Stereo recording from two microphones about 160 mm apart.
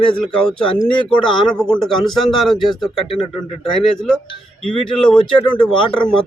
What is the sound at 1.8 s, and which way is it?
A man's voice, 5° left (ahead or behind).